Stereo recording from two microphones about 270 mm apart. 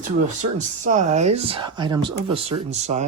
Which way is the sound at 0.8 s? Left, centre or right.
Right.